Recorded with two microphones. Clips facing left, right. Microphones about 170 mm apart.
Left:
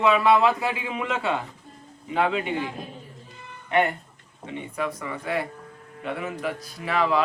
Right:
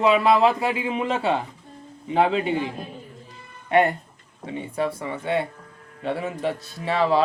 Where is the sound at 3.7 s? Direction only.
35° right (ahead or behind).